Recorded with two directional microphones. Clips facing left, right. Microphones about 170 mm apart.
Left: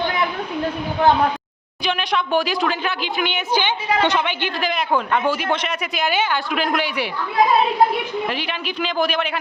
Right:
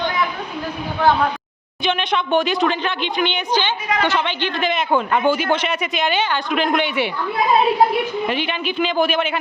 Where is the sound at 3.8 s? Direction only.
30° left (ahead or behind).